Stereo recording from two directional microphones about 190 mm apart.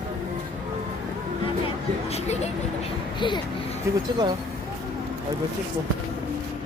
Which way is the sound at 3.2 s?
25° left (ahead or behind).